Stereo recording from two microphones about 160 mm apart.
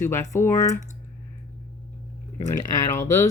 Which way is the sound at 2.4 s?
20° left (ahead or behind).